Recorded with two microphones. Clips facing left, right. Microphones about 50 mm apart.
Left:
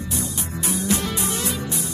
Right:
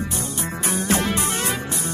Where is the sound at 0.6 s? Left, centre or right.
Right.